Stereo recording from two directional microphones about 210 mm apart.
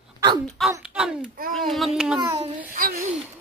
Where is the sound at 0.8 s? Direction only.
5° right (ahead or behind).